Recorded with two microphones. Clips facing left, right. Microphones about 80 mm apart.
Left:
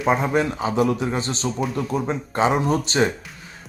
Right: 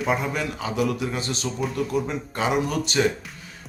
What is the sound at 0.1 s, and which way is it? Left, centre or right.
Speech, left.